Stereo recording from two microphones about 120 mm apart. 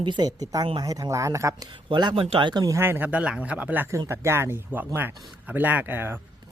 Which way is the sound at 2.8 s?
15° right (ahead or behind).